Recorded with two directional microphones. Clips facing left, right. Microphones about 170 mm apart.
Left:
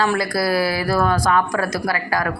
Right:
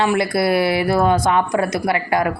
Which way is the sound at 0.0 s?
20° right (ahead or behind).